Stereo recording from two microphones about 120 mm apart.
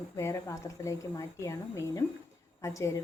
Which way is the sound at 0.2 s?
25° left (ahead or behind).